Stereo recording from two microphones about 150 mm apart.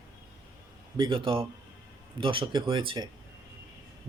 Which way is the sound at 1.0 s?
35° right (ahead or behind).